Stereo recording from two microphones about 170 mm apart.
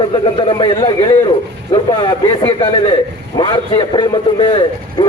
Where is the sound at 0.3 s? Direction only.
30° left (ahead or behind).